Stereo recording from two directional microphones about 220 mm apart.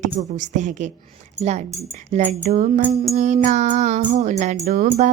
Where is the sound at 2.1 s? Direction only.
30° right (ahead or behind).